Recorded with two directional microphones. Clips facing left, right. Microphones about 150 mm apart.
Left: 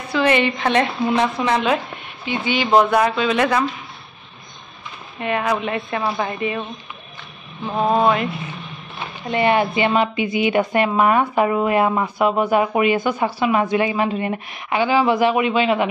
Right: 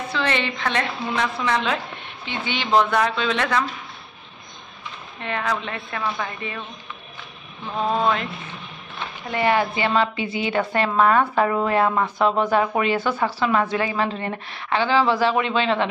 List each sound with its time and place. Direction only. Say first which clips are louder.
0.1 s a woman's voice: left 8 dB; 15° left (ahead or behind)
5.2 s a woman's voice: left 5 dB; 10° left (ahead or behind)
5.9 s a woman's voice: left 3 dB; 30° left (ahead or behind)
7.9 s a woman's voice: left 5 dB; 10° left (ahead or behind)
9.3 s a woman's voice: left 3 dB; 20° left (ahead or behind)